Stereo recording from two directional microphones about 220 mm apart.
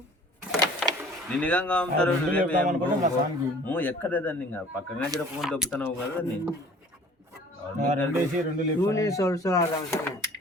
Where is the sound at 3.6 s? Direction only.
10° left (ahead or behind).